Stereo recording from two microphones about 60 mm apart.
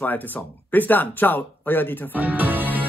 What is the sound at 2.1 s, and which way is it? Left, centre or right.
Music, right.